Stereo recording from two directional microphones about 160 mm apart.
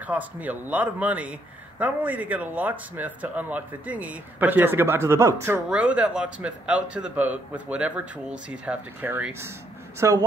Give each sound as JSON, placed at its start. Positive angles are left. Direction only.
{"t": 0.0, "sound": "speech", "side_deg": -10}